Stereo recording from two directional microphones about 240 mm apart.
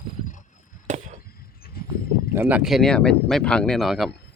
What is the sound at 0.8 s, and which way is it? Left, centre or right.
Chop, right.